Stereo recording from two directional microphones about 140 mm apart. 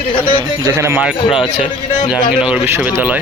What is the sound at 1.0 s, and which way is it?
Speech, 5° right (ahead or behind).